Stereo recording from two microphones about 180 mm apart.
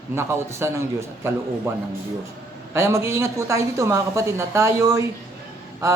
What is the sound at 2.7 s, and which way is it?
A woman's voice, 15° right (ahead or behind).